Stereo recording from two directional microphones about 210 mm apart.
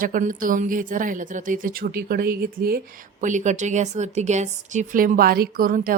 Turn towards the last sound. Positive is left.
turn(degrees=-40)  # may be behind; listen again after turning